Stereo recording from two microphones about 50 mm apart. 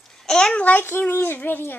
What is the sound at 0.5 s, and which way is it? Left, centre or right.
Speech, left.